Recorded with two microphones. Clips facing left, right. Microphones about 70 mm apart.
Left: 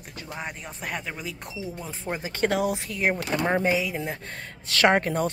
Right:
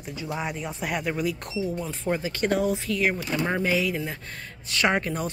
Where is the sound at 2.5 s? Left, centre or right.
Left.